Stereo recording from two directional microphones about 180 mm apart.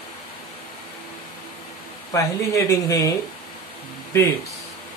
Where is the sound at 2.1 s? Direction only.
15° left (ahead or behind).